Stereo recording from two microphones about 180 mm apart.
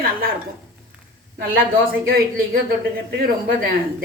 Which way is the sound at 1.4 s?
60° right (ahead or behind).